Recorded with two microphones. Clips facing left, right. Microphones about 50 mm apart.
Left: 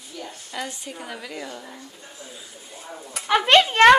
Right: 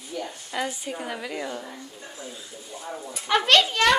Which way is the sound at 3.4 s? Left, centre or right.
Left.